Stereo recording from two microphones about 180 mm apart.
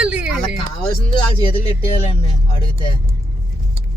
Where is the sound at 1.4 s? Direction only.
30° left (ahead or behind).